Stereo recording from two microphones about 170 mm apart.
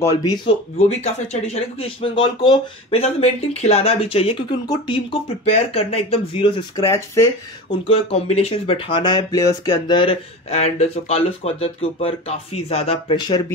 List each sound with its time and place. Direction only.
0.7 s speech: 40° left (ahead or behind)
7.9 s speech: 35° left (ahead or behind)